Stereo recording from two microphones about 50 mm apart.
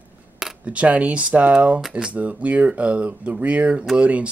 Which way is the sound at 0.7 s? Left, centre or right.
Right.